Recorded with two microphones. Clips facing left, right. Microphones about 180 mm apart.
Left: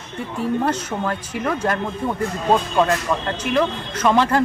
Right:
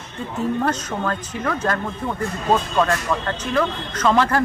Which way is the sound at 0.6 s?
10° left (ahead or behind).